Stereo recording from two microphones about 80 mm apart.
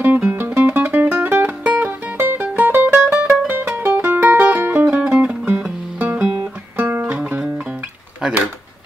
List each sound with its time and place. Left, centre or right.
0.0 s music: right
5.9 s guitar: centre
6.8 s music: right
7.2 s music: centre